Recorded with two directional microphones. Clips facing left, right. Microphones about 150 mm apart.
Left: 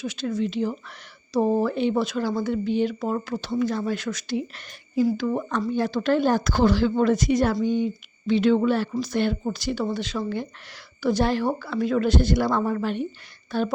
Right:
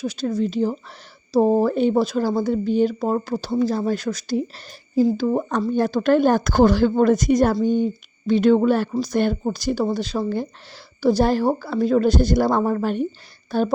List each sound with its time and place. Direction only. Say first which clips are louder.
0.0 s speech: right 4 dB; 35° right (ahead or behind)